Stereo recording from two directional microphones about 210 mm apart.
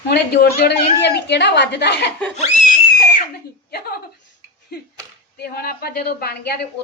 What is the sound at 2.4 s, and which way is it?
Screaming, 35° left (ahead or behind).